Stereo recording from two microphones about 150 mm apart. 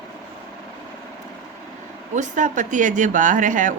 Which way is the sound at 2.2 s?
55° right (ahead or behind).